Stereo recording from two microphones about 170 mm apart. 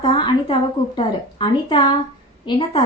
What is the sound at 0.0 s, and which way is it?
A woman's voice, 30° left (ahead or behind).